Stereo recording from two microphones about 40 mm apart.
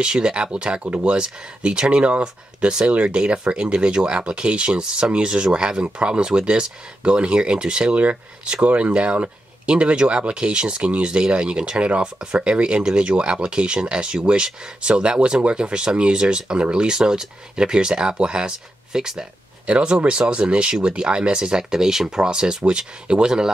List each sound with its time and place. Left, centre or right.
0.0 s speech: right
0.8 s speech: right
1.1 s speech: right
7.9 s speech: right; by 23.5 s centre